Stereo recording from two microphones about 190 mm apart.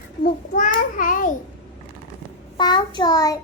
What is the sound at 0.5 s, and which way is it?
Speech, 45° left (ahead or behind).